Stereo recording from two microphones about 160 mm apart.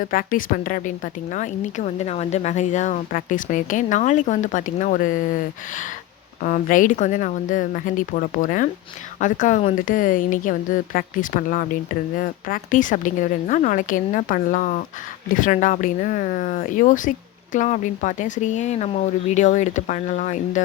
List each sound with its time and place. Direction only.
0.0 s a woman's voice: 60° left (ahead or behind)
6.4 s a woman's voice: 55° left (ahead or behind)